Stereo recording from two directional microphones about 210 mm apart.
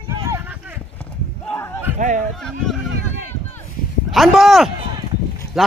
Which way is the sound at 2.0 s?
40° right (ahead or behind).